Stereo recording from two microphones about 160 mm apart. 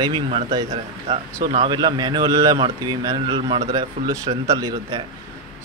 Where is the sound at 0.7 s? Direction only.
40° right (ahead or behind).